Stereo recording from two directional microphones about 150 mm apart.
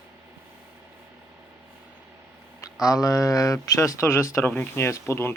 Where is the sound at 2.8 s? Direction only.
25° left (ahead or behind).